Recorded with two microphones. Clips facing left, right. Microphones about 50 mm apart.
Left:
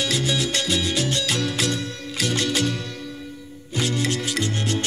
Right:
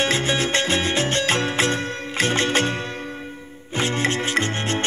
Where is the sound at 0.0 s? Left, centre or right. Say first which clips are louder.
Right 3 dB; right.